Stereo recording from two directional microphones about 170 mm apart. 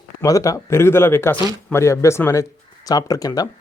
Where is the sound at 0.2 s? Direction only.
20° left (ahead or behind).